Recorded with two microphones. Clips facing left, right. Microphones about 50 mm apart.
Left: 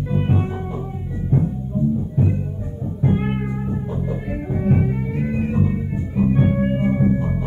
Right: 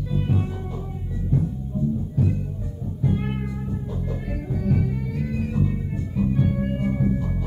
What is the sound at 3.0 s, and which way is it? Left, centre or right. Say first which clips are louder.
Music: left 5 dB; left.